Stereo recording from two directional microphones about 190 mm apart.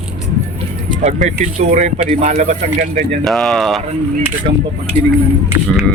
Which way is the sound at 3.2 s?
Centre (ahead or behind).